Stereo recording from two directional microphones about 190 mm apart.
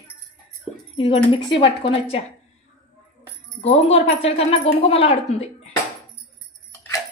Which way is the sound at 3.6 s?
35° left (ahead or behind).